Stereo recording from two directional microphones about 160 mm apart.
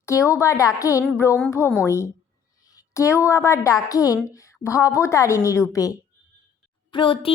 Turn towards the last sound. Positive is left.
turn(degrees=30)  # may be behind; listen again after turning